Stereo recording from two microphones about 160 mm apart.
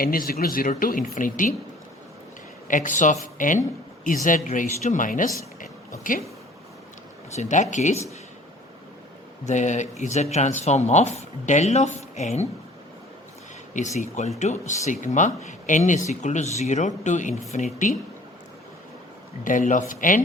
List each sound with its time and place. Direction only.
0.0 s speech: 65° left (ahead or behind)
2.6 s speech: 55° left (ahead or behind)
7.3 s speech: 50° left (ahead or behind)
9.5 s speech: 50° left (ahead or behind)
13.7 s speech: 50° left (ahead or behind)
19.5 s speech: 55° left (ahead or behind)